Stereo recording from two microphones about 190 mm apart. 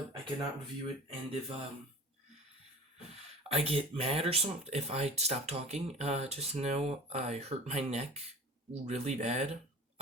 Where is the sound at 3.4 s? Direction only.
30° right (ahead or behind).